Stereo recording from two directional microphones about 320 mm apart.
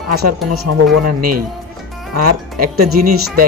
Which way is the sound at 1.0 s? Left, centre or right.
Right.